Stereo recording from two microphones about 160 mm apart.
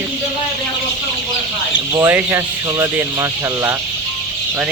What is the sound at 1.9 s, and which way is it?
Speech, 15° right (ahead or behind).